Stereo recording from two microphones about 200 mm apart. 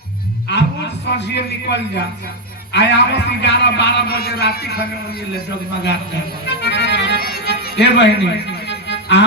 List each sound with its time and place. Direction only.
0.4 s a man's voice: 60° left (ahead or behind)
6.4 s accordion: 60° left (ahead or behind)